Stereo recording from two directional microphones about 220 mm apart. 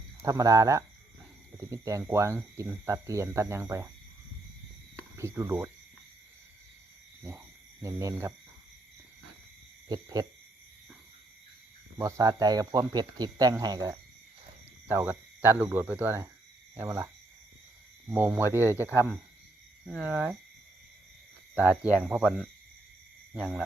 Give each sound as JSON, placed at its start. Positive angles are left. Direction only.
{"t": 0.2, "sound": "speech", "side_deg": -15}
{"t": 5.1, "sound": "speech", "side_deg": -15}
{"t": 7.3, "sound": "cricket", "side_deg": -15}
{"t": 9.9, "sound": "speech", "side_deg": -15}
{"t": 11.9, "sound": "speech", "side_deg": -15}
{"t": 18.1, "sound": "speech", "side_deg": -5}
{"t": 19.8, "sound": "speech", "side_deg": 5}
{"t": 21.5, "sound": "speech", "side_deg": -5}